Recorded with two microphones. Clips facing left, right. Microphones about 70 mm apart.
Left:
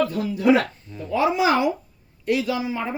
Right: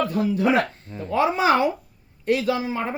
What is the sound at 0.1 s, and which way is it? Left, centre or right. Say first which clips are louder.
Speech: left 1 dB; right.